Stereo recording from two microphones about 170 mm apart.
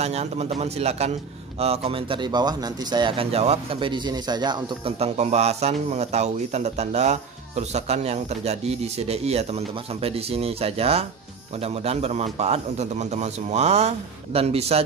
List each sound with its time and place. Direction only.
0.0 s speech: 40° right (ahead or behind)
4.9 s speech: 40° right (ahead or behind)